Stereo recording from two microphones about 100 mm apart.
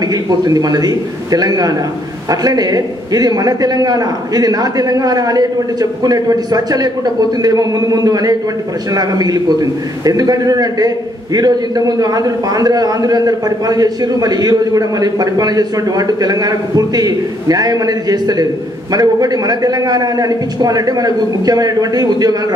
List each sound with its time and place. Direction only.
0.1 s a man's voice: 40° right (ahead or behind)